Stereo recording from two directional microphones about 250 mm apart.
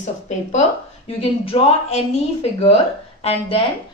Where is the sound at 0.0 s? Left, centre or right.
Left.